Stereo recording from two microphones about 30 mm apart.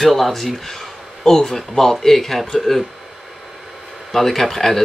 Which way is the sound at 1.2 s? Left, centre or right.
Centre.